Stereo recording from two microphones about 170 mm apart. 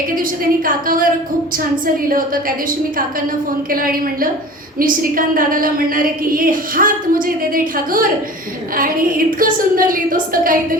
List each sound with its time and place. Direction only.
0.2 s a woman's voice: 55° right (ahead or behind)
2.0 s a woman's voice: 55° right (ahead or behind)